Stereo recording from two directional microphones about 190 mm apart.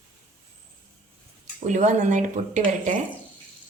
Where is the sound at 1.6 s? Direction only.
40° right (ahead or behind).